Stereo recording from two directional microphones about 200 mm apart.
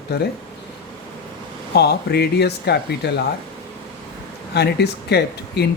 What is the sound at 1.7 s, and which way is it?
Speech, 55° left (ahead or behind).